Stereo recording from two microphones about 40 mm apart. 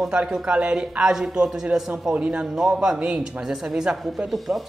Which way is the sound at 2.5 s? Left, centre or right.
Centre.